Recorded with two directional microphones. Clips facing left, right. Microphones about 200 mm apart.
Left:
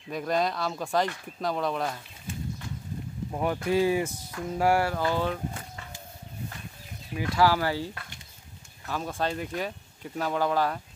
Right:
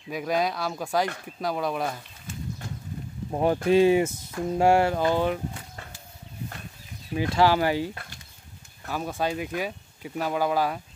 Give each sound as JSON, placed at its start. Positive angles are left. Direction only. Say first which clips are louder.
{"t": 0.1, "sound": "speech", "louder": "right 1 dB", "side_deg": -5}
{"t": 3.3, "sound": "speech", "louder": "right 5 dB", "side_deg": -30}
{"t": 7.2, "sound": "speech", "louder": "right 3 dB", "side_deg": -25}